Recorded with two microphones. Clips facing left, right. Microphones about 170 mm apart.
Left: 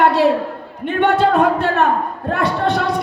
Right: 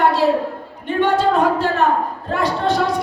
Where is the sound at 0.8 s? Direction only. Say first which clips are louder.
Left 2 dB; 60° left (ahead or behind).